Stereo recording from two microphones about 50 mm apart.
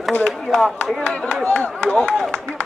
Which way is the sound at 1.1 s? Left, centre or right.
Left.